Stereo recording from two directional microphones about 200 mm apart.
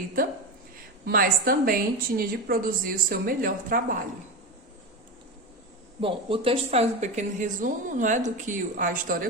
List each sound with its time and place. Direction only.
1.0 s a woman's voice: 45° right (ahead or behind)
6.0 s speech: 25° right (ahead or behind); by 9.2 s 45° right (ahead or behind)